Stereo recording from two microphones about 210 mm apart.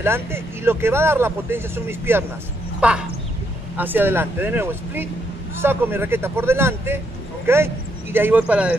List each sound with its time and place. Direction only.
0.0 s speech: 10° right (ahead or behind)